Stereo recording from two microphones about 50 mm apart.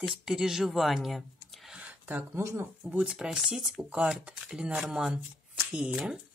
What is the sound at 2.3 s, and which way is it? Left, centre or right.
Speech, right.